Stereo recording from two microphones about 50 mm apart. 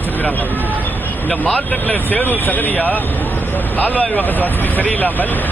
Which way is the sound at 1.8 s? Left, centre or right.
Left.